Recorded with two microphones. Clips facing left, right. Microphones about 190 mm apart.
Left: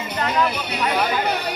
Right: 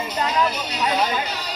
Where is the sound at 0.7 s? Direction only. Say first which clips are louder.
Left 1 dB; 60° left (ahead or behind).